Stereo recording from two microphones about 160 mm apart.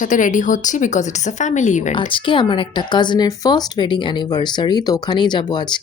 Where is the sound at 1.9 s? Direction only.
30° left (ahead or behind).